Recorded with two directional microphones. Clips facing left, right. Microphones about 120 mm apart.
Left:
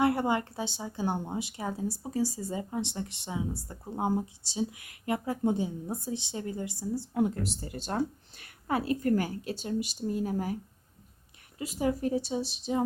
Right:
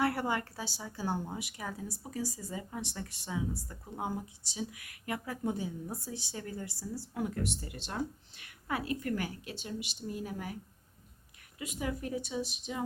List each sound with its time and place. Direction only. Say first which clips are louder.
0.0 s speech: left 5 dB; 20° left (ahead or behind)